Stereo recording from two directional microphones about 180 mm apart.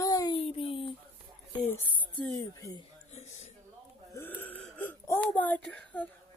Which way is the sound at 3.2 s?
40° left (ahead or behind).